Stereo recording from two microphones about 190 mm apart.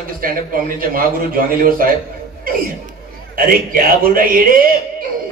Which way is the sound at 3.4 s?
50° right (ahead or behind).